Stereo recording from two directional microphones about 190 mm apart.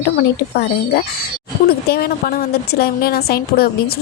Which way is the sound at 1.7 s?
55° left (ahead or behind).